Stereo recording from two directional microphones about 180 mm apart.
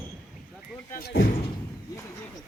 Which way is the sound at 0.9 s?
60° left (ahead or behind).